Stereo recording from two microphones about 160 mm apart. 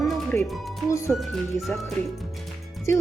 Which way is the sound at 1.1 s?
Centre (ahead or behind).